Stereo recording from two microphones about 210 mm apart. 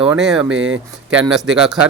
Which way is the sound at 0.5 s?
65° right (ahead or behind).